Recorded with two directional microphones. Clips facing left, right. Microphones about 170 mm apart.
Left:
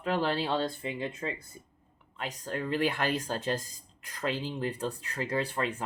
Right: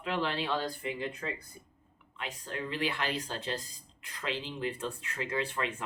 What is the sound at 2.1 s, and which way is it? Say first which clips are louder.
Speech: left 4 dB; 40° left (ahead or behind).